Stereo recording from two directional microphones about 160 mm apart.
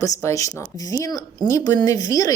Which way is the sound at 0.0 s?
20° left (ahead or behind).